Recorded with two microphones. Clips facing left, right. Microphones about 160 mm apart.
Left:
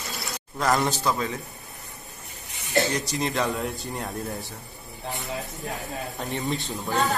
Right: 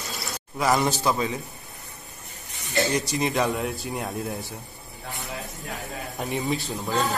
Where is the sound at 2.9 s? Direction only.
5° right (ahead or behind).